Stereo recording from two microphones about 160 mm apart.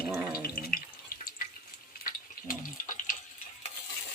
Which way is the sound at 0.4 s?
65° left (ahead or behind).